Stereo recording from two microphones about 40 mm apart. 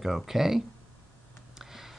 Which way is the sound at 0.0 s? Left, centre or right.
Centre.